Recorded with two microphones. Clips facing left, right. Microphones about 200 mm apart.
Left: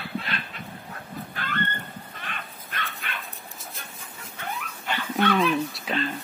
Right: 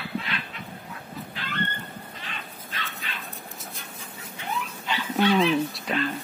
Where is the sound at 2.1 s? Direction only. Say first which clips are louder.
Left 1 dB; 55° left (ahead or behind).